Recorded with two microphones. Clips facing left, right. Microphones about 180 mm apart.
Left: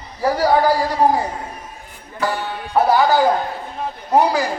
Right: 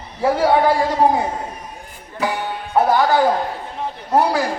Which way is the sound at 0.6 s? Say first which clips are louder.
Right 1 dB; 25° right (ahead or behind).